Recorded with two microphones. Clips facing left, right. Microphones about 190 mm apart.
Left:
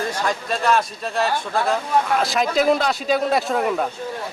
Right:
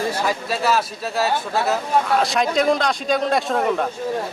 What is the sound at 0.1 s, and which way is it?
Speech, 5° right (ahead or behind).